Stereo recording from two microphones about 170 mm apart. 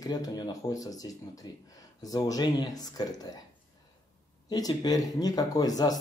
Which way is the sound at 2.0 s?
20° left (ahead or behind).